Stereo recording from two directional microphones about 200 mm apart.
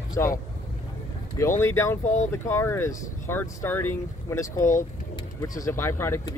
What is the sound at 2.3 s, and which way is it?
Speech, 10° left (ahead or behind).